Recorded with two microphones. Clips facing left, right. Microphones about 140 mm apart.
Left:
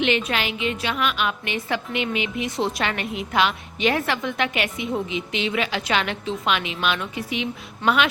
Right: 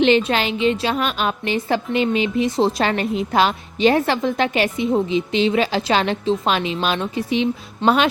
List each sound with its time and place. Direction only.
0.0 s a woman's voice: 30° right (ahead or behind)